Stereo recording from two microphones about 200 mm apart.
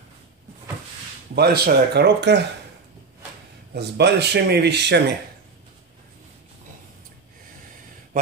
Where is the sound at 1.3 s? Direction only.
55° right (ahead or behind).